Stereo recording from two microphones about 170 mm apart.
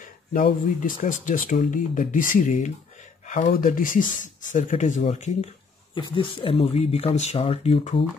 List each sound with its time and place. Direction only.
0.0 s speech: 55° left (ahead or behind)
5.9 s speech: 30° left (ahead or behind)